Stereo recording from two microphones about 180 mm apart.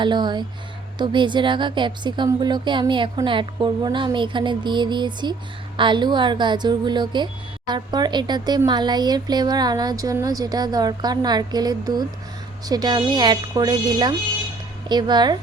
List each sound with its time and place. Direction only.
0.0 s a woman's voice: 25° right (ahead or behind)